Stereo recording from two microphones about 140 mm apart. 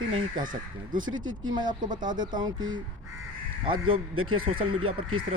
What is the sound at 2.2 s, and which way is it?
Speech, 30° right (ahead or behind).